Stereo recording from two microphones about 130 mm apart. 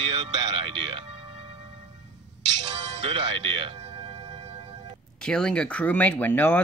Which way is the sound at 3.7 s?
45° right (ahead or behind).